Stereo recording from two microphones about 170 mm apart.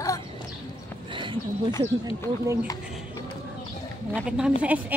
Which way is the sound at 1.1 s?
30° right (ahead or behind).